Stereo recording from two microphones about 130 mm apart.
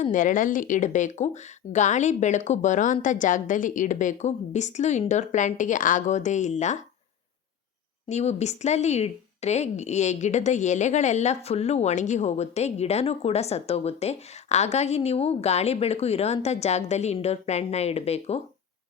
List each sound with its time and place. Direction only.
0.0 s speech: 85° left; by 6.7 s 65° left (ahead or behind)
8.0 s speech: 55° left (ahead or behind)